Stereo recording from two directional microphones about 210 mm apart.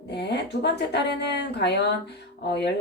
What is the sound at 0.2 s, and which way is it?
A woman's voice, 55° left (ahead or behind).